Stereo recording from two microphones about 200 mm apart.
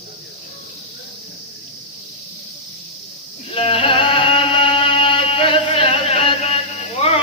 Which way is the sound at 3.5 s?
30° left (ahead or behind).